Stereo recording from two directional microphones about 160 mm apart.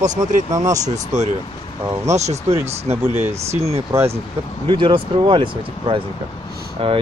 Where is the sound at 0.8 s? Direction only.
45° right (ahead or behind).